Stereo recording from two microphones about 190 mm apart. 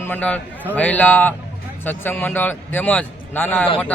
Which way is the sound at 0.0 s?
10° left (ahead or behind).